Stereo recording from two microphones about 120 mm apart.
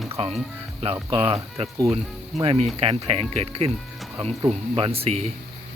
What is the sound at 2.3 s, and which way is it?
Speech, centre (ahead or behind).